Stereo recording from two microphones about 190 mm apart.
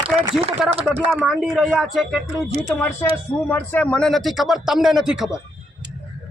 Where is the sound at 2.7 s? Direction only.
10° left (ahead or behind).